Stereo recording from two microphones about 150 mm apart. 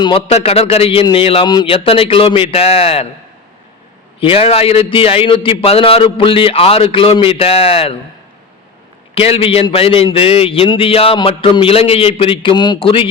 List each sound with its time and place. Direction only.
0.0 s speech: 35° left (ahead or behind)
4.2 s speech: 40° left (ahead or behind)
9.1 s speech: 40° left (ahead or behind)